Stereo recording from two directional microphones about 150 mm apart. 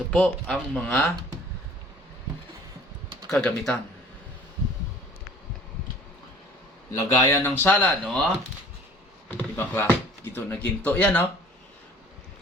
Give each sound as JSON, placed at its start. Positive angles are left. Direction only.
{"t": 0.1, "sound": "speech", "side_deg": 5}
{"t": 3.3, "sound": "speech", "side_deg": 10}
{"t": 6.9, "sound": "speech", "side_deg": 20}
{"t": 9.3, "sound": "speech", "side_deg": 15}